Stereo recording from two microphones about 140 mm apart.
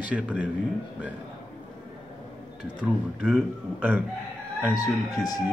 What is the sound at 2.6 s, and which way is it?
Speech, 10° right (ahead or behind).